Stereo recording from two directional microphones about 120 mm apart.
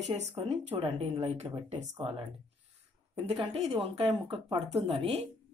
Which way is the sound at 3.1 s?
55° right (ahead or behind).